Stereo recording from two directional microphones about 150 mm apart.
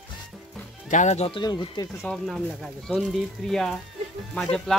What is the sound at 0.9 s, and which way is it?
Speech, 50° left (ahead or behind).